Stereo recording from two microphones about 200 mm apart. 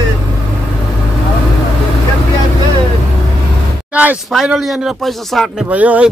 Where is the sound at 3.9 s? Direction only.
10° right (ahead or behind).